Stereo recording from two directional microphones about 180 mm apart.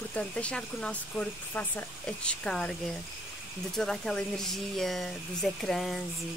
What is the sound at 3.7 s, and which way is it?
Speech, centre (ahead or behind).